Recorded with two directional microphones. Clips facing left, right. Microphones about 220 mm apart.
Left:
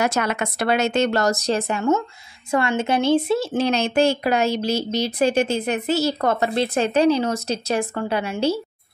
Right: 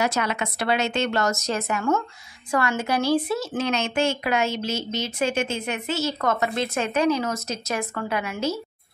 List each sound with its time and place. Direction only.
0.0 s speech: 50° left (ahead or behind); by 8.5 s 30° left (ahead or behind)